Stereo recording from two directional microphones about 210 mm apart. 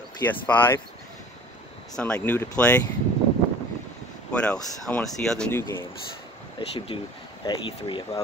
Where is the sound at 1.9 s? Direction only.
5° left (ahead or behind).